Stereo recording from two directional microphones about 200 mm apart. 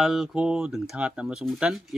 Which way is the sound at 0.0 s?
Centre (ahead or behind).